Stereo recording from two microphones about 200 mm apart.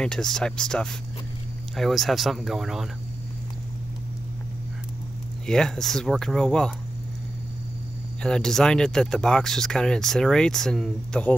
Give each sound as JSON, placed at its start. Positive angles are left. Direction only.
{"t": 0.0, "sound": "speech", "side_deg": 5}
{"t": 5.5, "sound": "speech", "side_deg": 0}
{"t": 8.2, "sound": "speech", "side_deg": 5}